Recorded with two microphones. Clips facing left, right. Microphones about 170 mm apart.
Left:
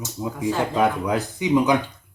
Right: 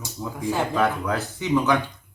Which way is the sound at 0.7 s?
15° left (ahead or behind).